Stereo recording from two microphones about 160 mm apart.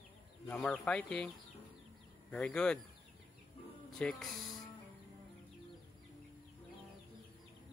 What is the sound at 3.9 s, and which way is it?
Speech, centre (ahead or behind).